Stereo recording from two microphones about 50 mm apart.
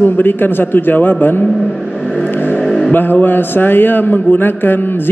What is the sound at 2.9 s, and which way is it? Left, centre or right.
A man's voice, left.